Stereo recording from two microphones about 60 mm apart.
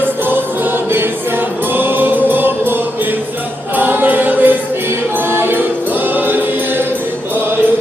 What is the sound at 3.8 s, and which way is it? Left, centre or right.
Choir, right.